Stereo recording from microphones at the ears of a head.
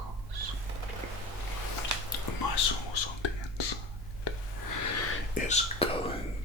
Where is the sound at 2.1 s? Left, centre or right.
Left.